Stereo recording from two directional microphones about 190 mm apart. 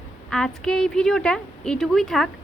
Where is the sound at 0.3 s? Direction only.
5° left (ahead or behind).